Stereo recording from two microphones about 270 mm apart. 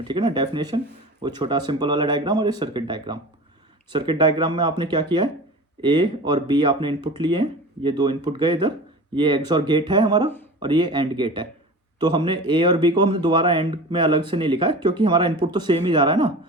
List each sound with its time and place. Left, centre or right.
0.1 s speech: centre